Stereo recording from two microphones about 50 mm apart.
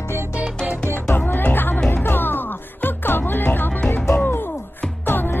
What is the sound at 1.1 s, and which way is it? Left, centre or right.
Music, left.